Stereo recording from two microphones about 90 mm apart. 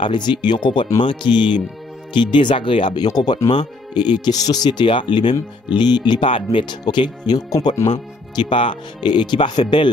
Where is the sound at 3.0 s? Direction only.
50° left (ahead or behind).